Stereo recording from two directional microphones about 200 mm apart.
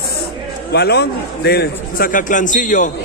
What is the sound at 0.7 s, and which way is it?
Speech, 55° left (ahead or behind).